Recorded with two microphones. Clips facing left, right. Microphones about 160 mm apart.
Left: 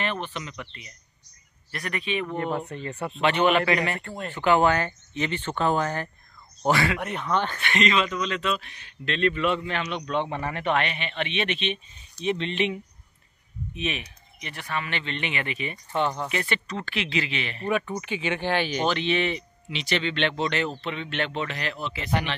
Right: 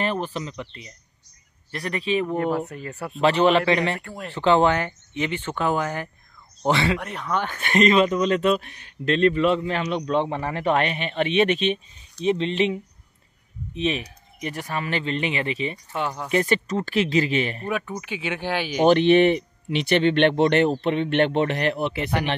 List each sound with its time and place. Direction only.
0.0 s speech: 40° right (ahead or behind)
2.3 s speech: 5° right (ahead or behind)
3.2 s speech: 35° right (ahead or behind)
3.8 s speech: centre (ahead or behind)
4.3 s speech: 25° right (ahead or behind)
6.6 s speech: 25° right (ahead or behind)
7.0 s speech: centre (ahead or behind)
7.6 s speech: 45° right (ahead or behind)
12.2 s speech: 25° right (ahead or behind)
15.9 s speech: 5° right (ahead or behind)
16.3 s speech: 45° right (ahead or behind)
17.6 s speech: 5° right (ahead or behind)
18.9 s speech: 55° right (ahead or behind)